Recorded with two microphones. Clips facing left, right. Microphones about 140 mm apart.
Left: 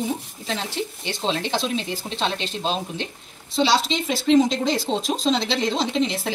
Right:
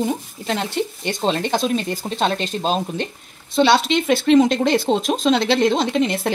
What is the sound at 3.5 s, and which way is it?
Speech, 60° right (ahead or behind).